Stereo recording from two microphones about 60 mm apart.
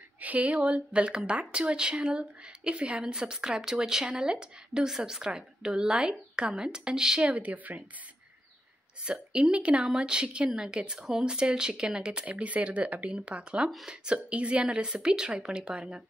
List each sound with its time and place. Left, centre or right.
0.2 s a woman's voice: right
7.2 s a woman's voice: right
9.0 s a woman's voice: centre